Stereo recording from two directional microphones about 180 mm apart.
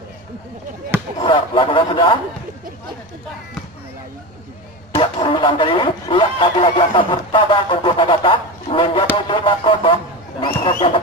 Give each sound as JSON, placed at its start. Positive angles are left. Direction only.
{"t": 1.2, "sound": "speech", "side_deg": 30}
{"t": 4.9, "sound": "speech", "side_deg": 30}